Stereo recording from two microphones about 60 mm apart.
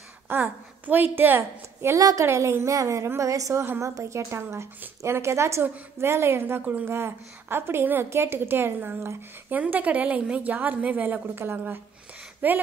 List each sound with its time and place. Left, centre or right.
0.3 s a woman's voice: right
2.0 s a woman's voice: right
2.2 s a woman's voice: right
6.6 s a woman's voice: right
6.9 s a woman's voice: right
9.6 s a woman's voice: right